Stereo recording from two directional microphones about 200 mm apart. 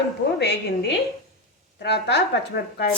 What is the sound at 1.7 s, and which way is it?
A woman's voice, 60° left (ahead or behind).